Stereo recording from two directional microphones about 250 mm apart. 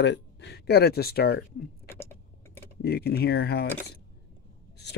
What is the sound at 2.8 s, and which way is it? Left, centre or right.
Speech, left.